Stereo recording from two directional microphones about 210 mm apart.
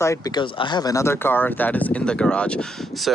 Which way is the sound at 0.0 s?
15° left (ahead or behind).